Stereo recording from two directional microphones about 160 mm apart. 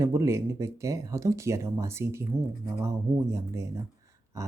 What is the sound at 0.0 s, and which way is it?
Speech, 20° right (ahead or behind).